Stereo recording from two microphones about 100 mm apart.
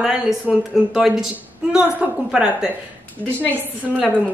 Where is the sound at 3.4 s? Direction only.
15° left (ahead or behind).